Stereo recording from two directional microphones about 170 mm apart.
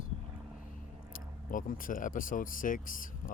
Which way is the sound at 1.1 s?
55° left (ahead or behind).